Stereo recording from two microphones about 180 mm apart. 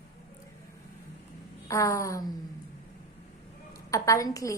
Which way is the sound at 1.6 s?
15° left (ahead or behind).